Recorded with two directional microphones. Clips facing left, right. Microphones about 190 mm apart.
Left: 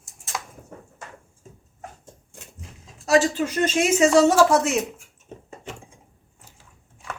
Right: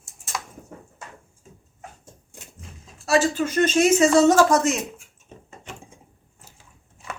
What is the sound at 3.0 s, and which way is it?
Speech, 15° left (ahead or behind).